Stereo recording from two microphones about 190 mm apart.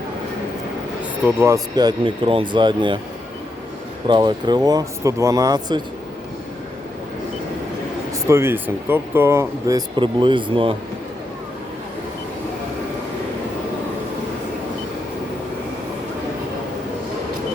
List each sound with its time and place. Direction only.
1.2 s speech: 15° right (ahead or behind)
4.0 s speech: 25° right (ahead or behind)
8.3 s speech: 15° right (ahead or behind)